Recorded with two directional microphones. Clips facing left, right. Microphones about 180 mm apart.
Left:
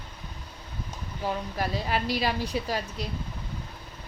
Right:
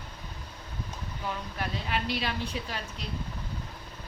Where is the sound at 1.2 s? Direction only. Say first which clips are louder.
Left 6 dB; 35° left (ahead or behind).